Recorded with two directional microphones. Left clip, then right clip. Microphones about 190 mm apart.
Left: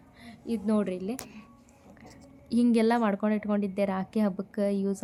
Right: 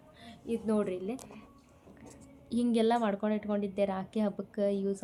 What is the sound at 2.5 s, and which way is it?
Speech, 10° left (ahead or behind).